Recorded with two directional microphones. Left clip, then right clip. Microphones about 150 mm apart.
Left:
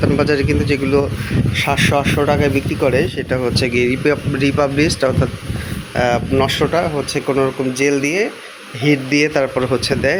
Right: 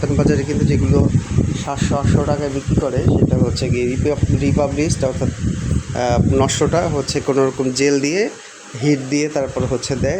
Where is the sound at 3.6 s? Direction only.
10° left (ahead or behind).